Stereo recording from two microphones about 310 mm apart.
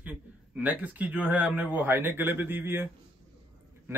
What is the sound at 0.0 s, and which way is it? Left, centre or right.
A man's voice, centre.